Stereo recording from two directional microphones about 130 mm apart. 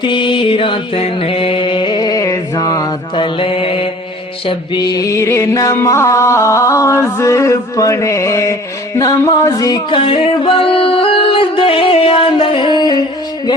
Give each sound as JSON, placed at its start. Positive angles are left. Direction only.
{"t": 0.0, "sound": "mantra", "side_deg": 40}
{"t": 3.2, "sound": "mantra", "side_deg": 45}
{"t": 4.4, "sound": "music", "side_deg": 35}
{"t": 9.9, "sound": "music", "side_deg": 45}